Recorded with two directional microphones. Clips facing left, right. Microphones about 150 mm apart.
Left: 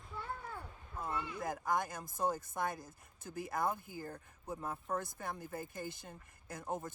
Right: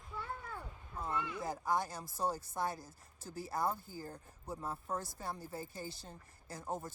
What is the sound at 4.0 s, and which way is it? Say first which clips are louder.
Speech: left 1 dB; 10° right (ahead or behind).